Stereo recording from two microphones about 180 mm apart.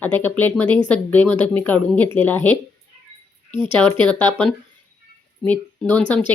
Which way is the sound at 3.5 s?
25° right (ahead or behind).